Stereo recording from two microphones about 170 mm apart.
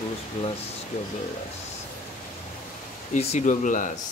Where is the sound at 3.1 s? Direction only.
45° left (ahead or behind).